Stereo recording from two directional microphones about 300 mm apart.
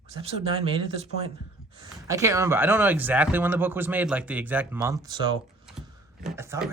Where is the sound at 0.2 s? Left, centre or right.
Centre.